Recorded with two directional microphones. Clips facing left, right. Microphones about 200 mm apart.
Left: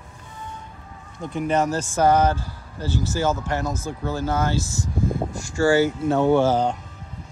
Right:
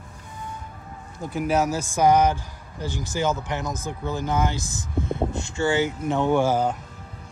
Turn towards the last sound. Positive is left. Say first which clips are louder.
# left 3 dB
turn(degrees=-10)  # may be behind; listen again after turning